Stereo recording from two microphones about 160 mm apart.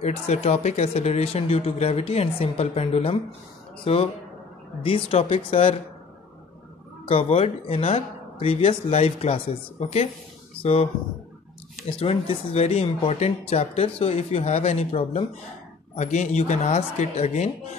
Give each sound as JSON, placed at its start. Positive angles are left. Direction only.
{"t": 0.0, "sound": "speech", "side_deg": 40}
{"t": 7.1, "sound": "speech", "side_deg": 35}
{"t": 12.0, "sound": "speech", "side_deg": 35}